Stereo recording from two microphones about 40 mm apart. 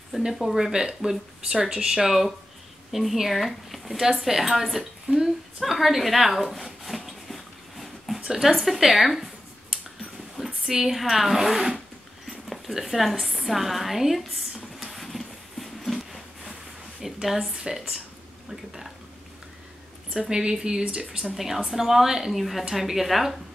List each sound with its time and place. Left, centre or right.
0.3 s a woman's voice: centre
2.0 s speech: centre
3.9 s a woman's voice: centre
5.1 s a sound: centre
8.4 s speech: centre
10.3 s speech: centre
12.3 s a sound: centre
17.5 s a woman's voice: centre
20.2 s speech: centre
21.2 s a woman's voice: centre